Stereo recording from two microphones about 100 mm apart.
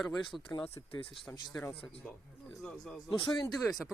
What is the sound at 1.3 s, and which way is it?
Speech, 30° left (ahead or behind).